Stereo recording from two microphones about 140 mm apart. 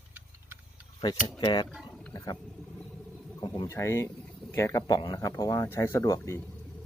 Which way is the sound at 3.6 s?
20° left (ahead or behind).